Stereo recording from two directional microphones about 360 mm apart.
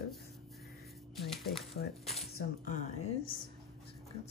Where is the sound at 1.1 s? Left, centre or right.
Centre.